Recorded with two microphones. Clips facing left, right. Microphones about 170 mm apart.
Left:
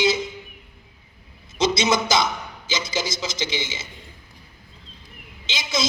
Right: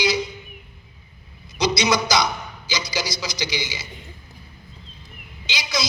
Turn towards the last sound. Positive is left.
turn(degrees=25)  # may be behind; listen again after turning